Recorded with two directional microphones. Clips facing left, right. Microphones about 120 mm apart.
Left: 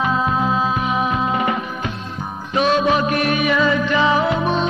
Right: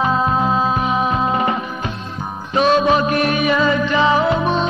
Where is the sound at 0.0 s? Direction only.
35° right (ahead or behind).